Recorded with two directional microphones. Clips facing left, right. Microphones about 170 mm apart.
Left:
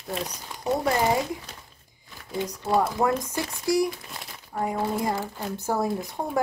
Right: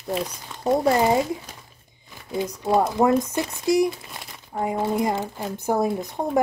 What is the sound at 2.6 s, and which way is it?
Speech, 25° right (ahead or behind).